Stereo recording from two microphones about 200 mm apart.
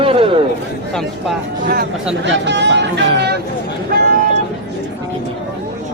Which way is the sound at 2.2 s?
60° right (ahead or behind).